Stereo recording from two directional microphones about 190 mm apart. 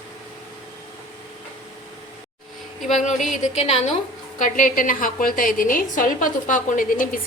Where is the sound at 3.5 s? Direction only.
30° left (ahead or behind).